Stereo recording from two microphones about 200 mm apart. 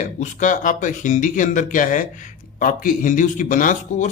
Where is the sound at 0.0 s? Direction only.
40° left (ahead or behind).